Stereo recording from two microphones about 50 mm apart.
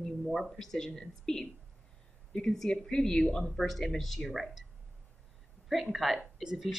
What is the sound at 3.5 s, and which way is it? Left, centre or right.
Speech, centre.